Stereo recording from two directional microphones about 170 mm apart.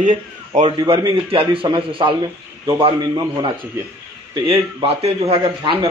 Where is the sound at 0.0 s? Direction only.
45° right (ahead or behind).